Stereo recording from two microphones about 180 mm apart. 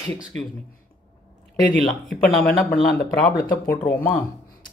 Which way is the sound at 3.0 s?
60° left (ahead or behind).